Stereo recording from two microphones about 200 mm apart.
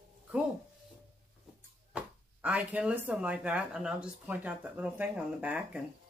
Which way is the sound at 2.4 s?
5° right (ahead or behind).